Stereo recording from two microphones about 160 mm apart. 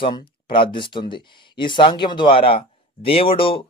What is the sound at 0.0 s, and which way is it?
Speech, 30° left (ahead or behind).